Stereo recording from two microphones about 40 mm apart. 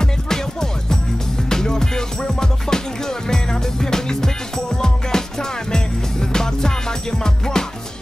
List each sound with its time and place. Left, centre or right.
0.0 s music: centre